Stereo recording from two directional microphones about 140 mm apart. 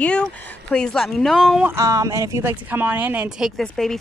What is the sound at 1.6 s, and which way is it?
Speech, 20° right (ahead or behind).